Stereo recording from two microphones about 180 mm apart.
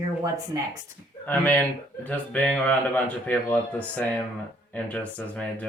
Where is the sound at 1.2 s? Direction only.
10° left (ahead or behind).